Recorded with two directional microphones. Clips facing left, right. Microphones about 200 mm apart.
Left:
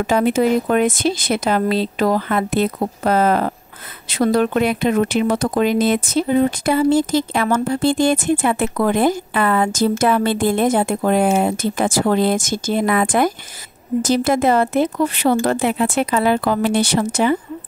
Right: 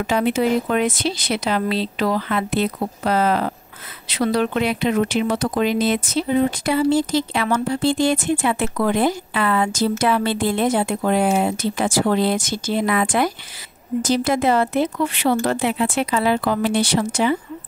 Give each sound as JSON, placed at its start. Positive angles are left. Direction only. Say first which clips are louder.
{"t": 0.0, "sound": "a woman's voice", "louder": "left 3 dB", "side_deg": 45}